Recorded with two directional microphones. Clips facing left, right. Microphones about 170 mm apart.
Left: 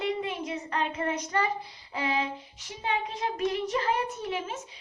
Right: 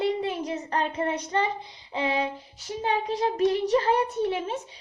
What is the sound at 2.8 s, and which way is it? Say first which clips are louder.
A child's voice: right 5 dB; 35° right (ahead or behind).